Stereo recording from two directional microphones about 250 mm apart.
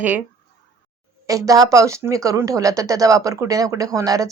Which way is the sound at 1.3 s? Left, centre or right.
Centre.